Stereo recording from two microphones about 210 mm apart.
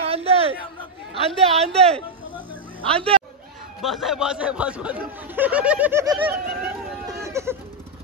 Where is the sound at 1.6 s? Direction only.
30° right (ahead or behind).